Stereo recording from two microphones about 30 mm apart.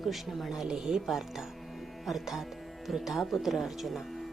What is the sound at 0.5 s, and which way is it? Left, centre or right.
Speech, centre.